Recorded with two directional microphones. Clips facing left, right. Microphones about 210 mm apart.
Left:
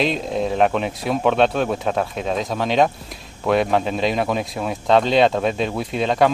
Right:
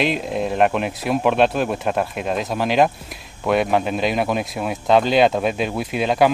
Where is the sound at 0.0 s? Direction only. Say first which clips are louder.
Even; 5° right (ahead or behind).